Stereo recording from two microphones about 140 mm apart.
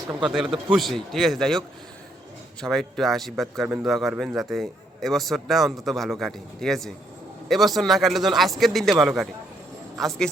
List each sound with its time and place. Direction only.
0.7 s a man's voice: centre (ahead or behind)